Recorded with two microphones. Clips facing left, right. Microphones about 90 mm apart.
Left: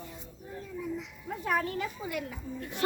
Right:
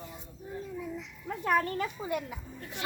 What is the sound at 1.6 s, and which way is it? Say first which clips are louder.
Speech: right 1 dB; 45° right (ahead or behind).